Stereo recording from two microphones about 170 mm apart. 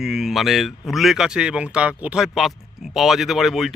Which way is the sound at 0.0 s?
Centre (ahead or behind).